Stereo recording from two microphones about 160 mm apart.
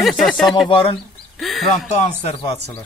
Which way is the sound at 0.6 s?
35° left (ahead or behind).